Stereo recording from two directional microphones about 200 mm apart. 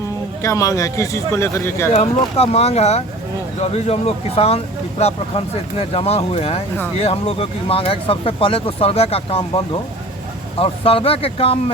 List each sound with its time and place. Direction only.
0.4 s speech: 15° left (ahead or behind)
1.9 s speech: 30° left (ahead or behind)
10.6 s speech: 30° left (ahead or behind)